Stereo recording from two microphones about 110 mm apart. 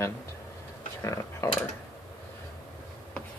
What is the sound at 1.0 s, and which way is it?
Speech, 25° left (ahead or behind).